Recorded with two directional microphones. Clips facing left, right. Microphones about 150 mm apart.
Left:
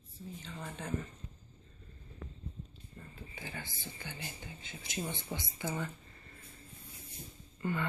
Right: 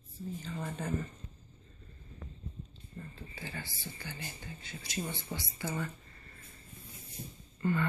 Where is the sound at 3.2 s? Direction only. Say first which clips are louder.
Even; 15° left (ahead or behind).